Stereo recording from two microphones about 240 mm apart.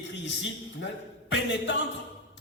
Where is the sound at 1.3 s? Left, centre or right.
Left.